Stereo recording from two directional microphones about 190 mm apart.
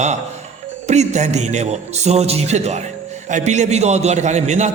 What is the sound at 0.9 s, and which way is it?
A man's voice, 35° right (ahead or behind).